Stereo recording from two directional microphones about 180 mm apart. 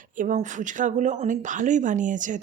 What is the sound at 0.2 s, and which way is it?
Speech, 45° right (ahead or behind).